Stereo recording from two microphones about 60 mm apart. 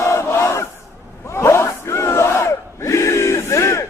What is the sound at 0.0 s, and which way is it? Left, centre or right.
Battle cry, left.